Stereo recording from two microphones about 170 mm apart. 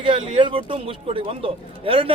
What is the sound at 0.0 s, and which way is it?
Speech, 35° right (ahead or behind).